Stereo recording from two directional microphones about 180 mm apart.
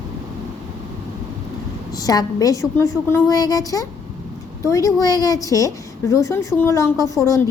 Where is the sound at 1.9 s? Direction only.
20° left (ahead or behind).